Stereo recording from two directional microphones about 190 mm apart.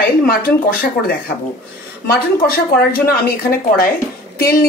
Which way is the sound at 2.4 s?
50° left (ahead or behind).